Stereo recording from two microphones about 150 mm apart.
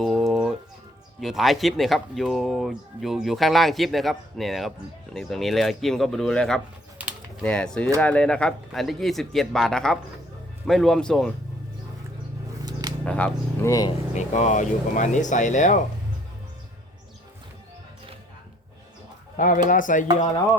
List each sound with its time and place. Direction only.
0.0 s a sound: centre (ahead or behind)
1.2 s speech: centre (ahead or behind)
7.0 s a sound: 10° right (ahead or behind)
7.4 s speech: 5° left (ahead or behind)
13.1 s speech: 10° left (ahead or behind)
13.7 s speech: 25° left (ahead or behind)
14.1 s speech: 50° left (ahead or behind)
19.4 s speech: 60° left (ahead or behind)